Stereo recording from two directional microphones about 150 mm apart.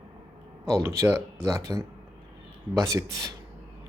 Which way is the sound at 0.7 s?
20° right (ahead or behind).